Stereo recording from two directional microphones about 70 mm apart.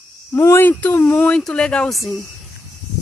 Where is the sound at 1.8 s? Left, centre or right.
Centre.